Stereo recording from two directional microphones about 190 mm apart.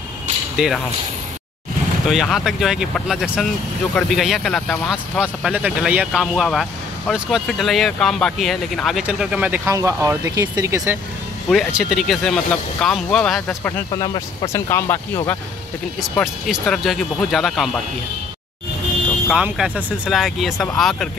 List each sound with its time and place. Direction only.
0.6 s speech: 5° right (ahead or behind)
2.0 s speech: centre (ahead or behind)
11.4 s speech: centre (ahead or behind)
13.9 s speech: 25° left (ahead or behind)
14.7 s speech: 15° left (ahead or behind)
16.0 s speech: centre (ahead or behind)
19.2 s speech: 5° right (ahead or behind)